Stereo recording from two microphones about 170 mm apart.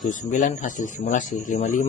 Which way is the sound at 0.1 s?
50° left (ahead or behind).